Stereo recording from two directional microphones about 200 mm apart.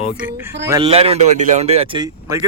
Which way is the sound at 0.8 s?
30° right (ahead or behind).